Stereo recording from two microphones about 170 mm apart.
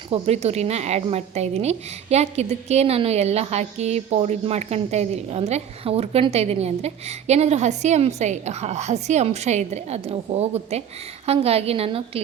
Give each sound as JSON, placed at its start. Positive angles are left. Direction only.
{"t": 0.1, "sound": "speech", "side_deg": -40}